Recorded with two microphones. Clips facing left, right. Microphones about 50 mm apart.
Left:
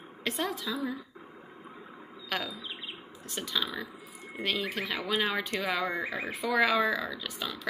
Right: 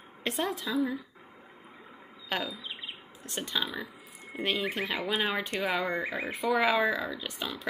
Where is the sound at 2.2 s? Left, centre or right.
Centre.